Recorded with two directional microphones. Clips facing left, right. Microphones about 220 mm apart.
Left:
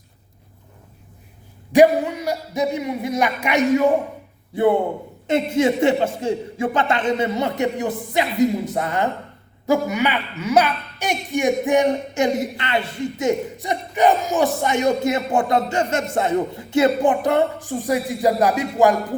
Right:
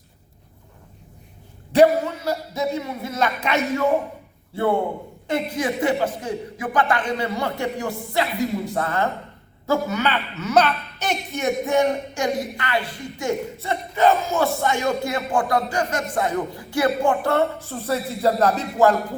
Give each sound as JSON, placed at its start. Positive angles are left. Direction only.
{"t": 1.7, "sound": "a woman's voice", "side_deg": 15}